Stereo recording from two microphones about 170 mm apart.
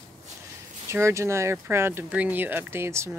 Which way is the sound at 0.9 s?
15° right (ahead or behind).